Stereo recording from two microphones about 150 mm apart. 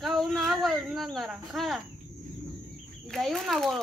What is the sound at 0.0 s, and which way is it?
Speech, centre (ahead or behind).